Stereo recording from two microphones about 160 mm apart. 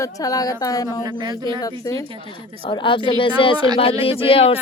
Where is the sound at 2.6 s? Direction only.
30° left (ahead or behind).